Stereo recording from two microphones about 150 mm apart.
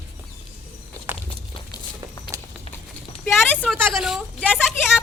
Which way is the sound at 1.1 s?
10° right (ahead or behind).